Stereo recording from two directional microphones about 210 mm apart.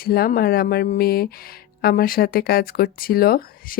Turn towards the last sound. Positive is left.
turn(degrees=45)  # may be behind; listen again after turning